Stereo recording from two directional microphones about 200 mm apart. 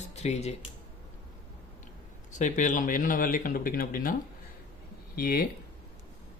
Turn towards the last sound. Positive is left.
turn(degrees=45)  # may be behind; listen again after turning